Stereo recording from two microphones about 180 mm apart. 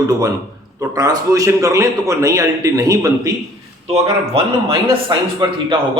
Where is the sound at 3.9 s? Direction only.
30° right (ahead or behind).